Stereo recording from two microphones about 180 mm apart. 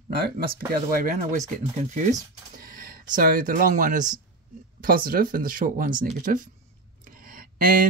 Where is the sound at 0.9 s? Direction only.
50° right (ahead or behind).